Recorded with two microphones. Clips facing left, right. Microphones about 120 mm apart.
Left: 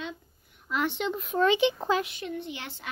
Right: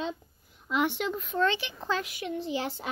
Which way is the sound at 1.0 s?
Centre (ahead or behind).